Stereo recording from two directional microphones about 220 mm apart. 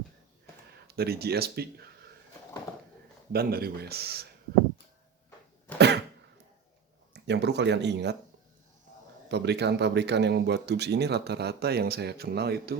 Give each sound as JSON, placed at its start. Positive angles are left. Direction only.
{"t": 0.9, "sound": "speech", "side_deg": -45}
{"t": 3.3, "sound": "speech", "side_deg": -45}
{"t": 5.7, "sound": "cough", "side_deg": 10}
{"t": 7.1, "sound": "speech", "side_deg": -50}
{"t": 9.3, "sound": "speech", "side_deg": -50}